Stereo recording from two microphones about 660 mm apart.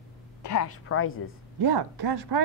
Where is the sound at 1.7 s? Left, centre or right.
Right.